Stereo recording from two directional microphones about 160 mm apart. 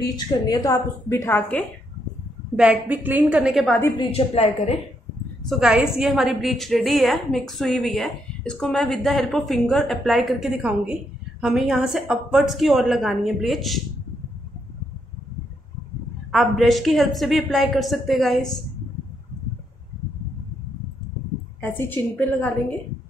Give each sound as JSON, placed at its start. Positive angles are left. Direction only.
{"t": 0.3, "sound": "a woman's voice", "side_deg": 25}
{"t": 2.5, "sound": "a woman's voice", "side_deg": -10}
{"t": 4.1, "sound": "a woman's voice", "side_deg": 40}
{"t": 5.5, "sound": "a woman's voice", "side_deg": -5}
{"t": 16.3, "sound": "a woman's voice", "side_deg": 0}
{"t": 21.5, "sound": "a woman's voice", "side_deg": 15}